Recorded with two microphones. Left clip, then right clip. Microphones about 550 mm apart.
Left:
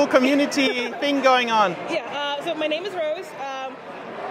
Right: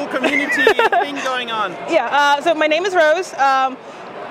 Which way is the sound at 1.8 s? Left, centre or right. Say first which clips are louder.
Right 12 dB; right.